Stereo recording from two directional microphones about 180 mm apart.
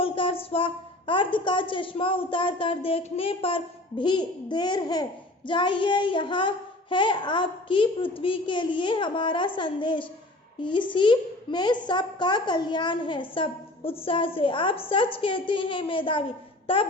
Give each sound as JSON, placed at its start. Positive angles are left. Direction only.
{"t": 0.0, "sound": "a woman's voice", "side_deg": 30}